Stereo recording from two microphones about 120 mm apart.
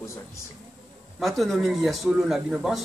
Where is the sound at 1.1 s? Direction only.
Centre (ahead or behind).